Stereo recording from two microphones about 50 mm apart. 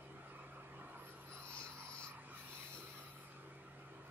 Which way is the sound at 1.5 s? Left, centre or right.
Left.